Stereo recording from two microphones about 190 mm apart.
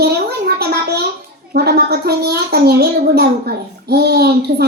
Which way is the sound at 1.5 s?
60° right (ahead or behind).